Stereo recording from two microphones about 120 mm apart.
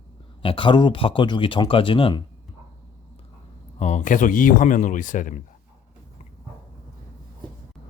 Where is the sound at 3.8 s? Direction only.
85° left.